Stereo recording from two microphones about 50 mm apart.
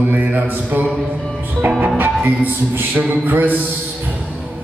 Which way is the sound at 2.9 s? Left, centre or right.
Right.